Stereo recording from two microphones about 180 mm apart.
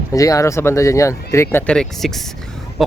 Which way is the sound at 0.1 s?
20° left (ahead or behind).